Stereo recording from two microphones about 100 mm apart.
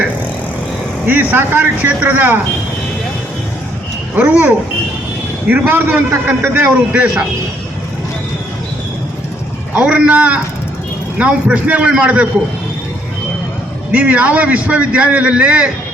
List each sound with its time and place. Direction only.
1.0 s speech: 20° right (ahead or behind)
4.1 s a man's voice: 20° right (ahead or behind)
9.7 s a man's voice: 15° right (ahead or behind)
13.9 s a man's voice: 15° right (ahead or behind)